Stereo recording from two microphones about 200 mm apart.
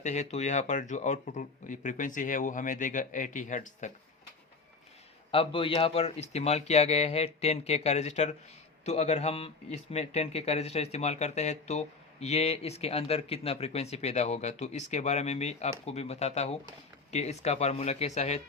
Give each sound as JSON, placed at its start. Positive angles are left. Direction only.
{"t": 0.0, "sound": "speech", "side_deg": 35}
{"t": 5.3, "sound": "speech", "side_deg": 25}